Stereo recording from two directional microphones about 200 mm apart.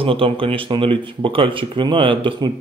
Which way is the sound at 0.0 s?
25° right (ahead or behind).